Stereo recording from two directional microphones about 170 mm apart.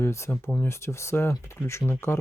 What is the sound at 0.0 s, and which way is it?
Speech, 15° left (ahead or behind).